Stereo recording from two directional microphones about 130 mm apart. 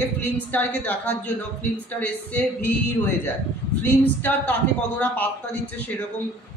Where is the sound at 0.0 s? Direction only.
15° left (ahead or behind).